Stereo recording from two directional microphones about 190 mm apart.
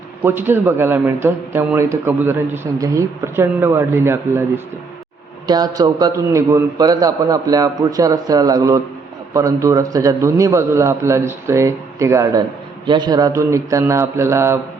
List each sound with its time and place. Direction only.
0.2 s a man's voice: 10° right (ahead or behind)